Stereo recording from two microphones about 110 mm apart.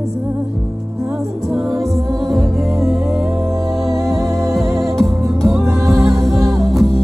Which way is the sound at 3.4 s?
30° right (ahead or behind).